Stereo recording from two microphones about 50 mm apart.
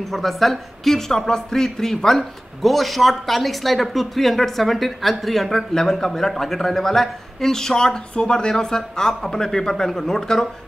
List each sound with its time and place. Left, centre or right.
0.0 s a man's voice: centre